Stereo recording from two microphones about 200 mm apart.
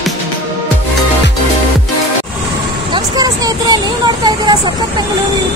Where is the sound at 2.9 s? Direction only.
20° right (ahead or behind).